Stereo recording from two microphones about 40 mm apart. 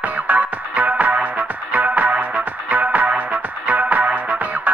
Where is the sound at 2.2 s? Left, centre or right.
Right.